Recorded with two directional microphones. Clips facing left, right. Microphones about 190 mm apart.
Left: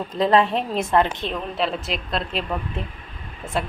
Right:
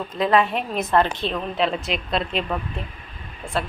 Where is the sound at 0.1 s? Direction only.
30° left (ahead or behind).